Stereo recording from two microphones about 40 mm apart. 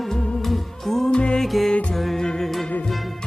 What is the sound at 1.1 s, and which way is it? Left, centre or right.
Music, left.